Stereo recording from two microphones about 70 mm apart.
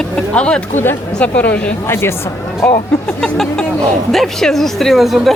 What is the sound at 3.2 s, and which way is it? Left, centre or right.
Speech, centre.